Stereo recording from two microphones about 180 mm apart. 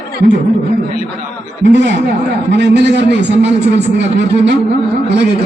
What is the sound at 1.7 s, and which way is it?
A man's voice, 75° right (ahead or behind).